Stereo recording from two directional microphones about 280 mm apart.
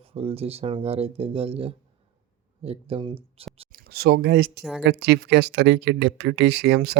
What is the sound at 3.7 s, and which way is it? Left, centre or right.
Speech, right.